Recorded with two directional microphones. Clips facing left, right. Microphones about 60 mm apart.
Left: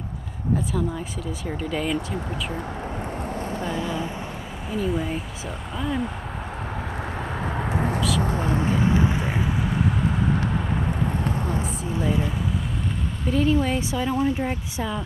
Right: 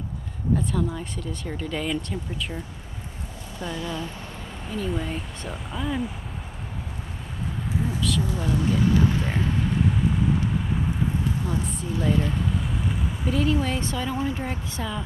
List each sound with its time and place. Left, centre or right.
0.7 s speech: centre
3.6 s speech: left
4.6 s speech: centre
7.5 s a sound: left
8.2 s speech: left; by 9.5 s centre
12.0 s speech: centre